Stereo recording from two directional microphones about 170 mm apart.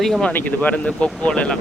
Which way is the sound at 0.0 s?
5° left (ahead or behind).